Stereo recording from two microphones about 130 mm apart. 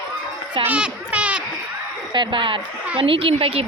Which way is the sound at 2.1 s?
40° right (ahead or behind).